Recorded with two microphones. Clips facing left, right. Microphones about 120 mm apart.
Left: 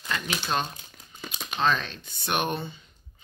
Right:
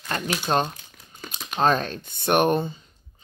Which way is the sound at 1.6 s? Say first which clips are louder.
Right 5 dB; 45° right (ahead or behind).